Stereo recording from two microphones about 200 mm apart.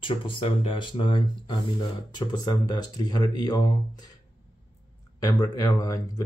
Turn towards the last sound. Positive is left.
turn(degrees=15)  # may be behind; listen again after turning